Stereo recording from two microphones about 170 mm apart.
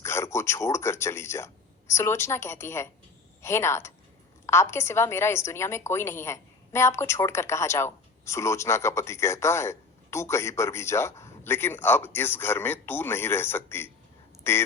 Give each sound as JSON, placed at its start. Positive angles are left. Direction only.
{"t": 0.0, "sound": "a woman's voice", "side_deg": 15}